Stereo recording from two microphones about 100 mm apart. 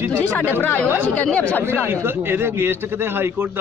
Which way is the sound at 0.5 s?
20° left (ahead or behind).